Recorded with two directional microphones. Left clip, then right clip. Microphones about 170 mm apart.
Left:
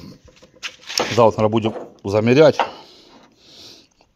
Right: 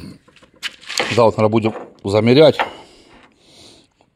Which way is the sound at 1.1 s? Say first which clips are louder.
Right 1 dB; 15° right (ahead or behind).